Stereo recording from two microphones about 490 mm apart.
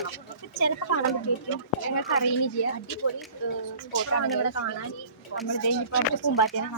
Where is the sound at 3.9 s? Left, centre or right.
Left.